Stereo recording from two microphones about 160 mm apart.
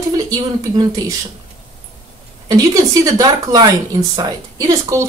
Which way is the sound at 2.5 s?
20° right (ahead or behind).